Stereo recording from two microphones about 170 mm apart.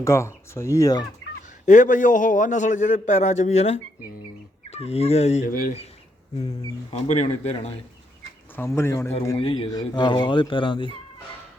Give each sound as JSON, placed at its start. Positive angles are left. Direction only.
{"t": 0.0, "sound": "speech", "side_deg": 15}
{"t": 1.6, "sound": "a man's voice", "side_deg": 45}
{"t": 5.5, "sound": "speech", "side_deg": 55}
{"t": 7.1, "sound": "speech", "side_deg": 40}
{"t": 8.5, "sound": "speech", "side_deg": 15}
{"t": 9.4, "sound": "speech", "side_deg": 35}